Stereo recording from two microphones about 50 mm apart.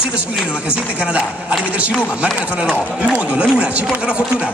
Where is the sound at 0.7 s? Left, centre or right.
Right.